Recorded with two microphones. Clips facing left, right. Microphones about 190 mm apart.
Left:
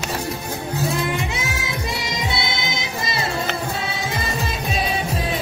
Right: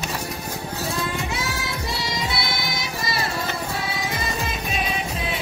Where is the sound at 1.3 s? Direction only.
20° left (ahead or behind).